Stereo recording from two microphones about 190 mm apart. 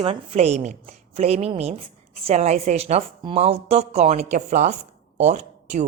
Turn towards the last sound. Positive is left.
turn(degrees=-35)  # may be behind; listen again after turning